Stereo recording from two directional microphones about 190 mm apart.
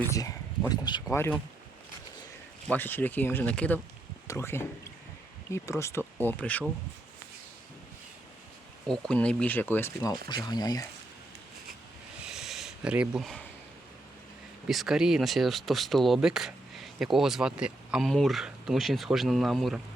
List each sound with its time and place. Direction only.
0.1 s speech: 15° left (ahead or behind)
2.6 s speech: 10° left (ahead or behind)
8.9 s speech: 5° left (ahead or behind); by 10.8 s 20° left (ahead or behind)
12.2 s a sound: centre (ahead or behind)
14.7 s speech: centre (ahead or behind)